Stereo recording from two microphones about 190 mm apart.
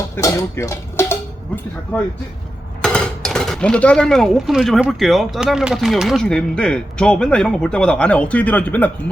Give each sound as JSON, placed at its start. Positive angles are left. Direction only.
{"t": 0.2, "sound": "speech", "side_deg": 15}